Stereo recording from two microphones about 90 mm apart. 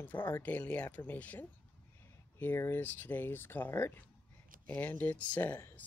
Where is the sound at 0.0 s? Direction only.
20° left (ahead or behind).